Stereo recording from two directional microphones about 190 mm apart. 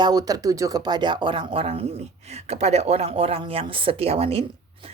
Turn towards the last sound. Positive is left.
turn(degrees=-30)  # may be behind; listen again after turning